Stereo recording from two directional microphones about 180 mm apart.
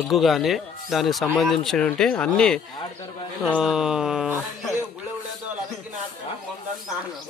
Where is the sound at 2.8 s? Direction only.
25° left (ahead or behind).